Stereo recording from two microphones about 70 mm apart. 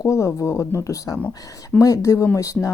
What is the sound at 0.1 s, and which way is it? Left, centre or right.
A woman's voice, left.